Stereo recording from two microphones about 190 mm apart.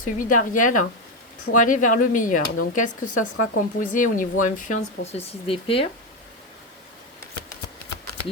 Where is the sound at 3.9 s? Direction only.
45° left (ahead or behind).